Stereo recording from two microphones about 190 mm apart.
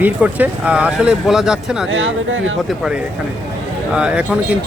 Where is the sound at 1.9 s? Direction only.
90° right.